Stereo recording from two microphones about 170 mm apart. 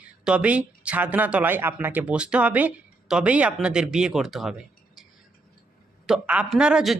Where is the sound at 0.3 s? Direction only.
10° right (ahead or behind).